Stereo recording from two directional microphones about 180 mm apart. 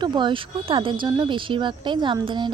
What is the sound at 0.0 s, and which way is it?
Speech, 25° right (ahead or behind).